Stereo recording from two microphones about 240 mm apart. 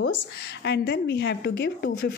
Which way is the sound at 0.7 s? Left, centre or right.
Left.